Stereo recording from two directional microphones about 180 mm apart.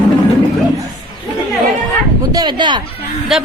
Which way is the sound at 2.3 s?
25° right (ahead or behind).